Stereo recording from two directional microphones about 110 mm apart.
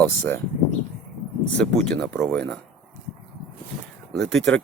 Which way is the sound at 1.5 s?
5° left (ahead or behind).